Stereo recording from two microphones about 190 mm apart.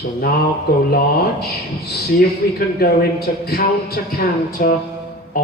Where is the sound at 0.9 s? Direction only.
55° left (ahead or behind).